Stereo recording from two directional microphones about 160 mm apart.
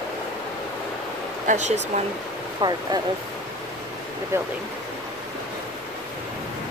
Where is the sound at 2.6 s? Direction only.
25° right (ahead or behind).